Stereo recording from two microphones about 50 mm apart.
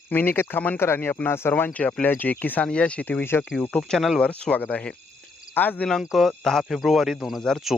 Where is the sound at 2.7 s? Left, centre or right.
Left.